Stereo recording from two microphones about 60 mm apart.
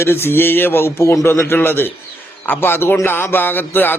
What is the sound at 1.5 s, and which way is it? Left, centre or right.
A man's voice, left.